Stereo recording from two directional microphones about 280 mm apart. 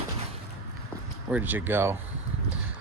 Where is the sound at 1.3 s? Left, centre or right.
Centre.